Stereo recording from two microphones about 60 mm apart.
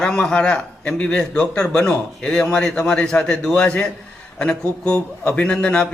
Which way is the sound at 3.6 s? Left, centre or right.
Left.